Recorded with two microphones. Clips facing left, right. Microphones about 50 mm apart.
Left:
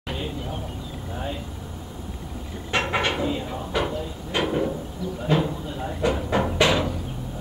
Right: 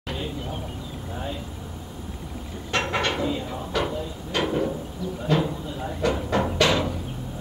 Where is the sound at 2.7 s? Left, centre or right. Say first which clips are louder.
Left 1 dB; centre.